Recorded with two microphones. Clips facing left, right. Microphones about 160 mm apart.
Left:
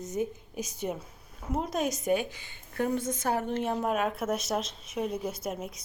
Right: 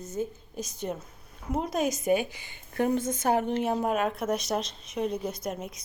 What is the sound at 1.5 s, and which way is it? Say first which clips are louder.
A woman's voice: right 2 dB; centre (ahead or behind).